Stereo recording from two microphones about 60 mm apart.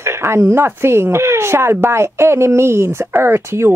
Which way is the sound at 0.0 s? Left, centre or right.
Right.